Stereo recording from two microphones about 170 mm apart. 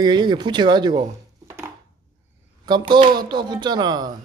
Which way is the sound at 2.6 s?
25° right (ahead or behind).